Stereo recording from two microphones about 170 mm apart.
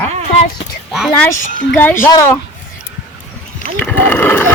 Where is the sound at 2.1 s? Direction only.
15° left (ahead or behind).